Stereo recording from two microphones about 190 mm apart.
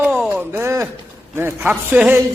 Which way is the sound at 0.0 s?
10° right (ahead or behind).